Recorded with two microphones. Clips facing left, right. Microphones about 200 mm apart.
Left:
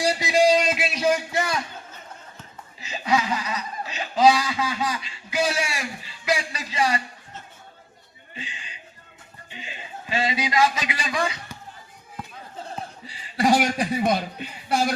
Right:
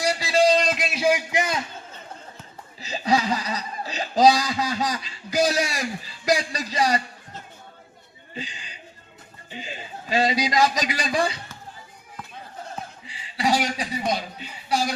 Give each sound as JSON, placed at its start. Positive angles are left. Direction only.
{"t": 0.0, "sound": "a sound", "side_deg": 15}
{"t": 0.9, "sound": "a man's voice", "side_deg": -10}
{"t": 2.8, "sound": "speech", "side_deg": -35}
{"t": 10.1, "sound": "a man's voice", "side_deg": -40}
{"t": 13.1, "sound": "speech", "side_deg": 50}